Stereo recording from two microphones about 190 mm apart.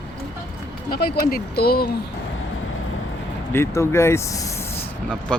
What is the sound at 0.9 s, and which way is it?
Speech, 55° left (ahead or behind).